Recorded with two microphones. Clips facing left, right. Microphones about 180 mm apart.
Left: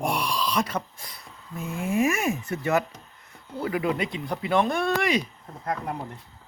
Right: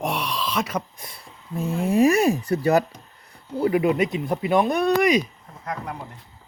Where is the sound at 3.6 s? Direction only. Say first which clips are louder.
Right 6 dB; 25° right (ahead or behind).